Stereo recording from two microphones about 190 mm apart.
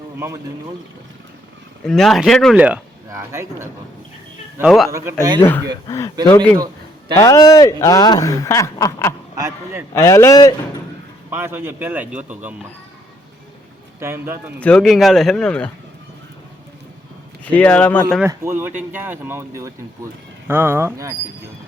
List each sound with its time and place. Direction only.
1.8 s speech: 5° left (ahead or behind); by 3.7 s 15° right (ahead or behind)
4.9 s speech: 15° right (ahead or behind)
5.4 s speech: 10° left (ahead or behind)
7.2 s speech: 20° left (ahead or behind)
9.3 s a man's voice: 15° right (ahead or behind)
9.9 s speech: 15° left (ahead or behind)
11.3 s speech: 10° right (ahead or behind)
14.0 s speech: 10° right (ahead or behind)
14.6 s speech: 5° left (ahead or behind)
17.5 s speech: 5° left (ahead or behind)
18.2 s speech: 15° right (ahead or behind)